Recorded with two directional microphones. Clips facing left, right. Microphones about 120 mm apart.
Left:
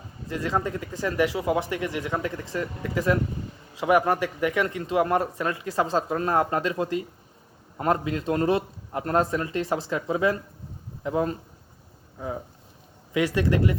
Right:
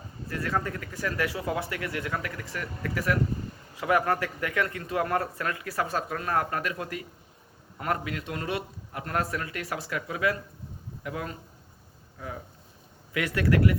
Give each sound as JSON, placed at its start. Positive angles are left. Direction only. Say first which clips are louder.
{"t": 0.3, "sound": "a man's voice", "louder": "left 3 dB", "side_deg": 20}